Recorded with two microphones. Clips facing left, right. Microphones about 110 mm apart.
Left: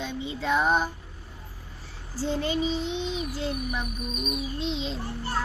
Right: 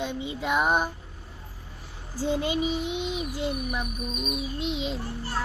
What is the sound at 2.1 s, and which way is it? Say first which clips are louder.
A woman's voice: right 1 dB; 15° right (ahead or behind).